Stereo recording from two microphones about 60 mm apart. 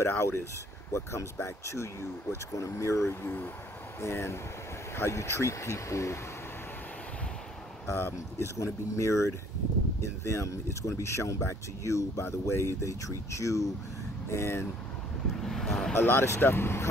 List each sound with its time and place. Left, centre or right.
0.0 s speech: left
7.8 s speech: left
14.3 s speech: left
15.3 s speech: centre
15.9 s speech: left